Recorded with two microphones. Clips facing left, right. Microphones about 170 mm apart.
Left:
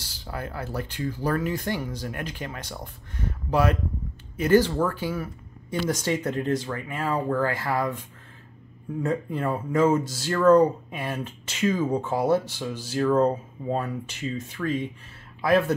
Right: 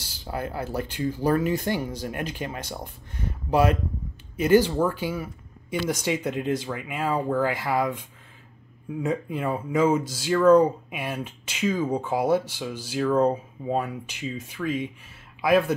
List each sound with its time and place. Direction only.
0.3 s speech: 20° right (ahead or behind)
5.9 s speech: 5° right (ahead or behind)
9.0 s speech: 15° right (ahead or behind)
9.8 s speech: centre (ahead or behind)